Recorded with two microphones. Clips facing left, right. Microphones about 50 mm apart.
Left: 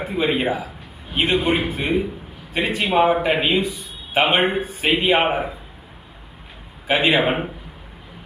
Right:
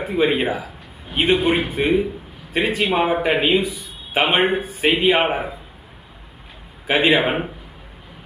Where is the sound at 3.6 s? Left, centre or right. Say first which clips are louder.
Left 1 dB; centre.